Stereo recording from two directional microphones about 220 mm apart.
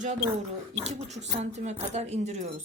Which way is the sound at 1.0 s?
30° right (ahead or behind).